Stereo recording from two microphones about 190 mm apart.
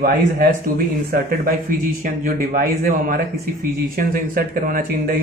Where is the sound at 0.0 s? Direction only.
50° right (ahead or behind).